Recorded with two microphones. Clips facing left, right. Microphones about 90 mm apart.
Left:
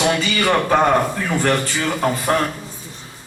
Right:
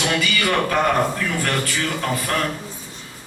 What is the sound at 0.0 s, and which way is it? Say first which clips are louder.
A man's voice: left 3 dB; 30° left (ahead or behind).